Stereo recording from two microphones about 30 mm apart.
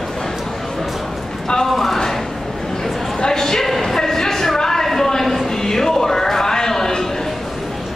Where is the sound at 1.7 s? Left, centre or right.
Centre.